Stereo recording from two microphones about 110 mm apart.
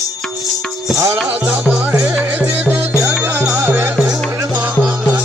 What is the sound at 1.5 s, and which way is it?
Music, 10° right (ahead or behind).